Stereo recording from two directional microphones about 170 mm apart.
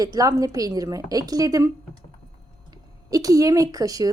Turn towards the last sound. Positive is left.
turn(degrees=-20)  # may be behind; listen again after turning